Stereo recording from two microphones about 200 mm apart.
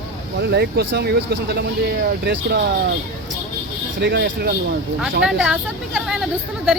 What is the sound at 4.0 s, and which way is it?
Speech, 55° right (ahead or behind).